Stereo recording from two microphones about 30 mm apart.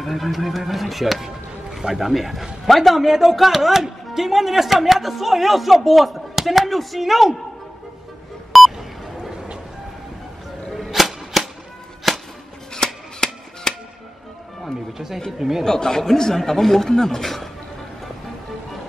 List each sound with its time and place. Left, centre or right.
0.0 s speech: centre
1.2 s speech: centre
3.1 s a woman's voice: centre
8.5 s beep: centre
11.0 s a sound: centre
12.1 s music: centre
12.7 s music: centre
15.3 s a woman's voice: centre
15.6 s speech: centre
17.2 s speech: centre